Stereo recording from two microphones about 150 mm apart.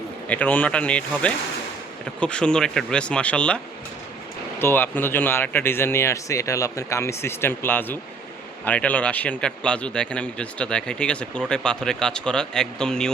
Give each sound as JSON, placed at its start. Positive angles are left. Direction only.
{"t": 0.3, "sound": "speech", "side_deg": 10}
{"t": 4.6, "sound": "a man's voice", "side_deg": 15}